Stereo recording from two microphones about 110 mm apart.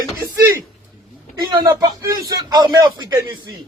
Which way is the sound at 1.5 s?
40° right (ahead or behind).